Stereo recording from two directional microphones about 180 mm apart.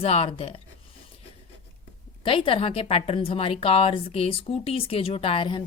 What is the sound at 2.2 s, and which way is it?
A woman's voice, 30° left (ahead or behind).